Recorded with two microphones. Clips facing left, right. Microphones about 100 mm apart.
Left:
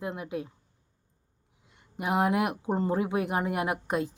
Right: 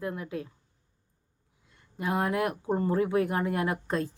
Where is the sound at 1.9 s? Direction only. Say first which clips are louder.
Left 2 dB; 20° left (ahead or behind).